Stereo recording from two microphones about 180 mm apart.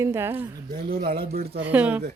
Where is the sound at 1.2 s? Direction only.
60° right (ahead or behind).